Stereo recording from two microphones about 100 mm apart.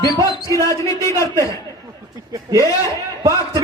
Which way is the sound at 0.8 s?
30° left (ahead or behind).